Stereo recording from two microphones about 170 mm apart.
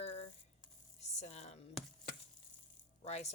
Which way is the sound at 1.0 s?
40° left (ahead or behind).